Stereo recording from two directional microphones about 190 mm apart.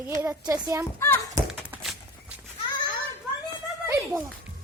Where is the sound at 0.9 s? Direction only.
15° left (ahead or behind).